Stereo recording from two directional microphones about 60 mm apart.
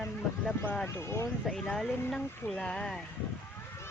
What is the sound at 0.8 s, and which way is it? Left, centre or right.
Speech, left.